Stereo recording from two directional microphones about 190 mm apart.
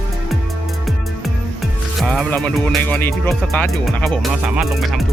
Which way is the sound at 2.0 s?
5° left (ahead or behind).